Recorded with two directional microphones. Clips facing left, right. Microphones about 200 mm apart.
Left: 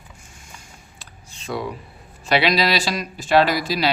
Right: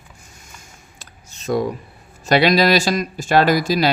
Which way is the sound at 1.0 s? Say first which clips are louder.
Even; 45° right (ahead or behind).